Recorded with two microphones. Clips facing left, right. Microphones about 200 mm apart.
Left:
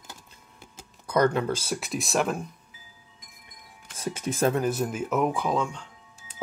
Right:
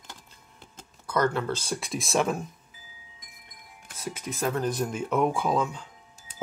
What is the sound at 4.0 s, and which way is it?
Speech, 30° left (ahead or behind).